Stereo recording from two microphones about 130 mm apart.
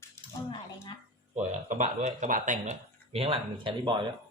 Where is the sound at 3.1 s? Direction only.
45° right (ahead or behind).